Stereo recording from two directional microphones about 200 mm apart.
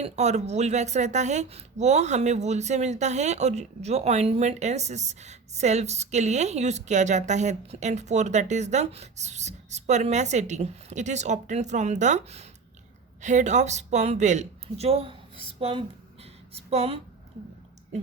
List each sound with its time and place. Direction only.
0.0 s a woman's voice: 35° right (ahead or behind)